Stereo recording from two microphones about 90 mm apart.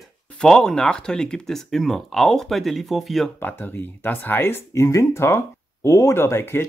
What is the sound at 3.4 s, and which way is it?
Speech, 20° left (ahead or behind).